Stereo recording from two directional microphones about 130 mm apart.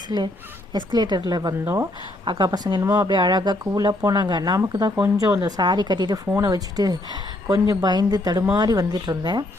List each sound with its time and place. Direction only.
0.9 s speech: 35° right (ahead or behind)
1.6 s a woman's voice: 20° right (ahead or behind)
2.2 s a woman's voice: 35° right (ahead or behind)